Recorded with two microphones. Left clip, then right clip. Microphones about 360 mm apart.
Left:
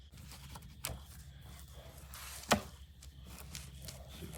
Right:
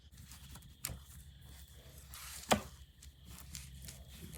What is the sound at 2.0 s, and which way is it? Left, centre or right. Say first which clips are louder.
Chop: left 1 dB; centre.